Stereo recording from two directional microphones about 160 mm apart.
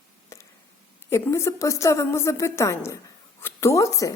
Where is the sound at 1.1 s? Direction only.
15° left (ahead or behind).